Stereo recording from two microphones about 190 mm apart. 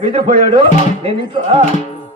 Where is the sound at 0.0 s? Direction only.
30° right (ahead or behind).